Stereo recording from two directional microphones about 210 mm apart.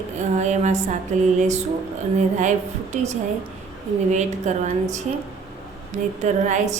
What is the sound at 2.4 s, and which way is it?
A woman's voice, 35° right (ahead or behind).